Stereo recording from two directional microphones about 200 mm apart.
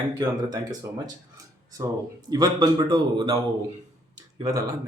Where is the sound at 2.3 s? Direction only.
20° right (ahead or behind).